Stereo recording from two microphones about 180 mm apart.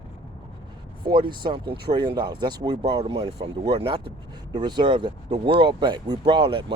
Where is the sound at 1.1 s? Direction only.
25° right (ahead or behind).